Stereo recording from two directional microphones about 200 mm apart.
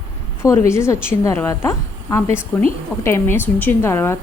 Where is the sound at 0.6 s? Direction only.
15° left (ahead or behind).